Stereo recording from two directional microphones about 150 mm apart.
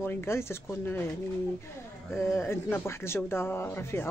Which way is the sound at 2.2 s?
15° left (ahead or behind).